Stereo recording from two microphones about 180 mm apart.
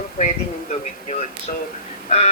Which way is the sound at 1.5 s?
45° left (ahead or behind).